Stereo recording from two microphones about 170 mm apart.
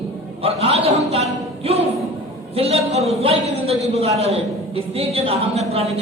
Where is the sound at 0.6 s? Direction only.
35° right (ahead or behind).